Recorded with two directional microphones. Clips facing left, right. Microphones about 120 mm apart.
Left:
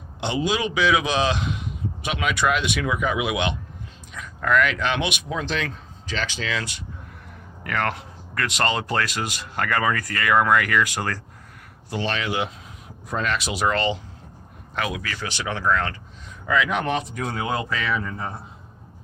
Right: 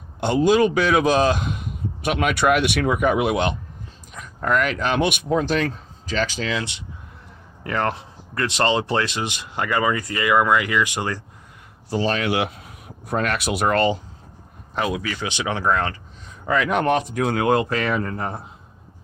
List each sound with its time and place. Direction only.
0.2 s a man's voice: 50° right (ahead or behind)
6.6 s speech: 20° right (ahead or behind)
11.9 s speech: 35° right (ahead or behind)
12.2 s speech: 65° right (ahead or behind); by 14.0 s 50° right (ahead or behind)
14.8 s speech: 20° right (ahead or behind)
16.5 s speech: 45° right (ahead or behind); by 18.3 s 60° right (ahead or behind)